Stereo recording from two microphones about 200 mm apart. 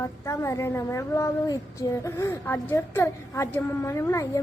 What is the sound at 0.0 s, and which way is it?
A woman's voice, 15° left (ahead or behind).